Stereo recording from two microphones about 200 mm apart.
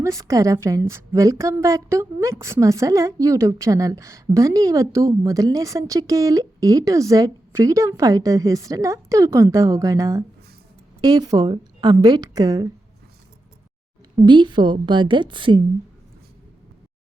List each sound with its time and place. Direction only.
0.0 s a woman's voice: 15° right (ahead or behind)
14.3 s a woman's voice: 25° right (ahead or behind)